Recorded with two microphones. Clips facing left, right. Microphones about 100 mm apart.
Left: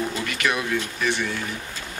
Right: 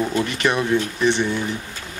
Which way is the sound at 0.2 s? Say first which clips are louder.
Right 5 dB; 30° right (ahead or behind).